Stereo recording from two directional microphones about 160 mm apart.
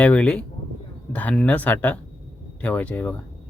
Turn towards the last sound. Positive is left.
turn(degrees=10)  # may be behind; listen again after turning